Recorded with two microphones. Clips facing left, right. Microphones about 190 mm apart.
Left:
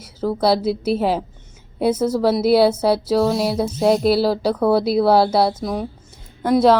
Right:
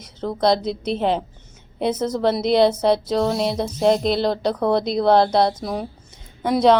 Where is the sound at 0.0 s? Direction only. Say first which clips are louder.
Left 1 dB; 5° left (ahead or behind).